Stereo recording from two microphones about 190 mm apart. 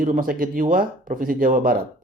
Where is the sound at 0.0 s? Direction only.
50° right (ahead or behind).